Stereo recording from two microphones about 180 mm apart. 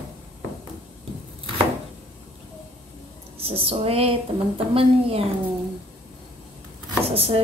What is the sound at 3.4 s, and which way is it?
A woman's voice, 35° right (ahead or behind).